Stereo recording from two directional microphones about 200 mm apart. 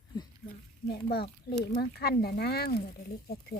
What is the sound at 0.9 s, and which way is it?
Speech, 50° left (ahead or behind).